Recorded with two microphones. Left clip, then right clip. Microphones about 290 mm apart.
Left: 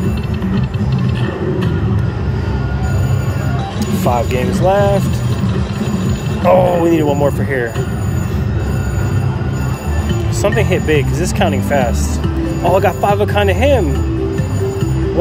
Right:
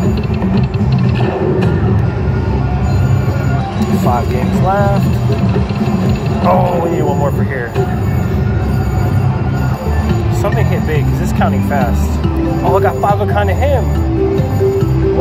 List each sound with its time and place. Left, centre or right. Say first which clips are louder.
4.6 s speech: left 2 dB; left
6.4 s a man's voice: left 2 dB; left
10.4 s speech: left 5 dB; left